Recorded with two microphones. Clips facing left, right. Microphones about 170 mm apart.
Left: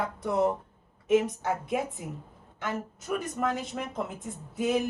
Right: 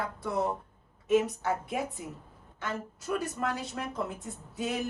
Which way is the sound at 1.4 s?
20° left (ahead or behind).